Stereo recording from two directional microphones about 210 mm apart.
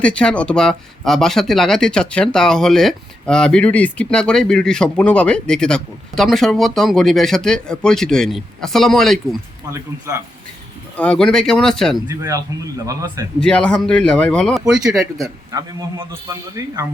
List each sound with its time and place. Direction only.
0.0 s speech: 5° left (ahead or behind)
10.9 s speech: 5° left (ahead or behind)
12.0 s a man's voice: 15° right (ahead or behind)
13.4 s speech: 5° left (ahead or behind)
15.2 s a man's voice: 15° right (ahead or behind)